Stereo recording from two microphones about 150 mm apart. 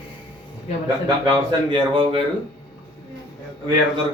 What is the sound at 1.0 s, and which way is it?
Speech, 30° right (ahead or behind).